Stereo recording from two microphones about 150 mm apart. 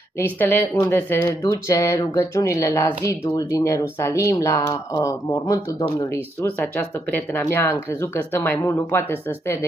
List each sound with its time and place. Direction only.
0.2 s speech: 15° left (ahead or behind)
8.6 s speech: 25° left (ahead or behind)